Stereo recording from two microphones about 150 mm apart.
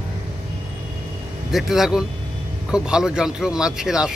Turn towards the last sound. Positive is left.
turn(degrees=-5)  # may be behind; listen again after turning